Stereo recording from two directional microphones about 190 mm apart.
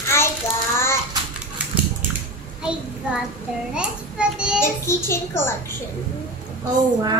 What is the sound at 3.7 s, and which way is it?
Speech, 5° right (ahead or behind).